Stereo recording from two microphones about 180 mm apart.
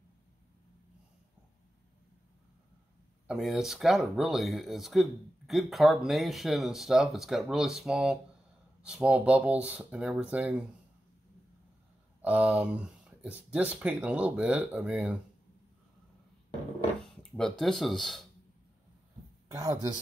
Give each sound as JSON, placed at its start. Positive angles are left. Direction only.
{"t": 3.3, "sound": "speech", "side_deg": -5}
{"t": 12.2, "sound": "speech", "side_deg": -10}
{"t": 17.0, "sound": "a sound", "side_deg": 5}
{"t": 17.6, "sound": "speech", "side_deg": 0}
{"t": 19.5, "sound": "speech", "side_deg": -20}